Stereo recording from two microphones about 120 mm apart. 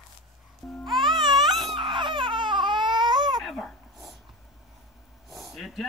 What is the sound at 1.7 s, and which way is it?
Baby cry, 40° right (ahead or behind).